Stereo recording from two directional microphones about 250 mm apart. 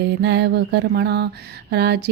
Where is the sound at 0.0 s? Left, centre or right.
Right.